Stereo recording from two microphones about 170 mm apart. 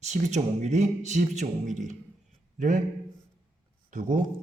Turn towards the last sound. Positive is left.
turn(degrees=-50)  # may be behind; listen again after turning